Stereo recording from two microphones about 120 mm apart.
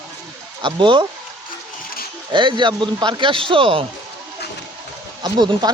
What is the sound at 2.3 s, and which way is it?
A man's voice, 40° right (ahead or behind).